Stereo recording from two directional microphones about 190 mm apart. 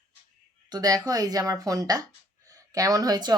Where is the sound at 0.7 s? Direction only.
20° right (ahead or behind).